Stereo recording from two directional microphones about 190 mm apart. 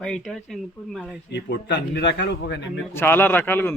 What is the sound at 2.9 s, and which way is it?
Speech, 10° left (ahead or behind).